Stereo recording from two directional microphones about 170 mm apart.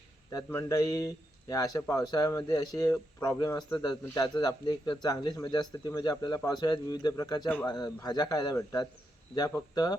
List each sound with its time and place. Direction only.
0.3 s speech: 20° left (ahead or behind)
7.4 s a man's voice: 10° left (ahead or behind)
7.7 s speech: 20° left (ahead or behind)